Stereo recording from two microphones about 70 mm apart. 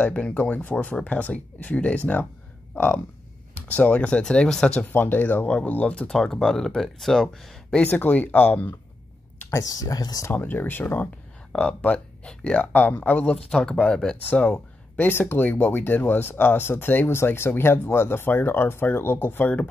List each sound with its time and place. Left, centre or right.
0.0 s speech: centre
3.6 s speech: left
4.8 s speech: left; by 7.5 s centre
7.8 s speech: left
9.5 s speech: left
10.3 s speech: left
11.5 s speech: centre
15.0 s speech: left